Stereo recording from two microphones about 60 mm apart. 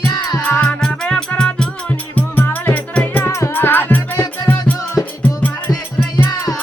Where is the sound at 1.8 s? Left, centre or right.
Left.